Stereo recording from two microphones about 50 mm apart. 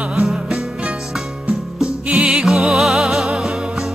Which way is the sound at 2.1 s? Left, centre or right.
Centre.